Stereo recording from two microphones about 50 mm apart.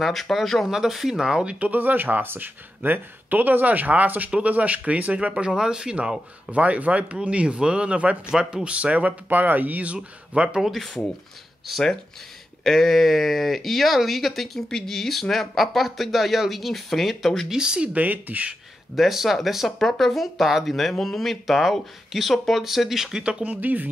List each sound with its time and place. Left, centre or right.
0.0 s speech: centre; by 1.7 s right
1.7 s speech: right
5.6 s speech: centre
6.5 s speech: right
8.3 s speech: centre; by 9.9 s right
10.3 s speech: right
10.6 s speech: centre
12.6 s speech: centre
17.5 s speech: centre
17.9 s speech: right
18.9 s speech: centre
23.4 s speech: right